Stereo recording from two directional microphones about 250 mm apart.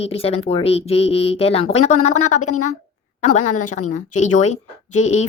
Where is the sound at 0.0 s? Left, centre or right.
Left.